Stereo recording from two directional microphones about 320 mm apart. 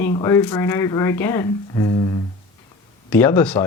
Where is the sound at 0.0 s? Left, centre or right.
Centre.